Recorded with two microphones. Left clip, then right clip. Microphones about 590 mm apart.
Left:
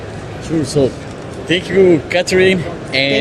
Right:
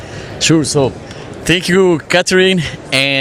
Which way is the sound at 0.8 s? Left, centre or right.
Right.